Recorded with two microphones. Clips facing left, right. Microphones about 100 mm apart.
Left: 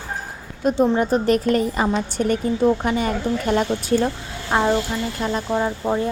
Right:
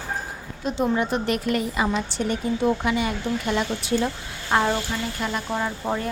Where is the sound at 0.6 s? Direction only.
50° left (ahead or behind).